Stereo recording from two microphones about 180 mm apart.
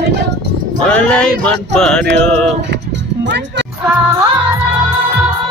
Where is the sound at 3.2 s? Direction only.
70° right (ahead or behind).